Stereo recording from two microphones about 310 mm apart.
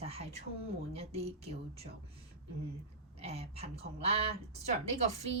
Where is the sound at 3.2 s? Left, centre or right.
Centre.